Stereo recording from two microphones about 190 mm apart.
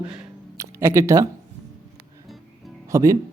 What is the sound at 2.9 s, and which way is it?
Speech, 15° right (ahead or behind).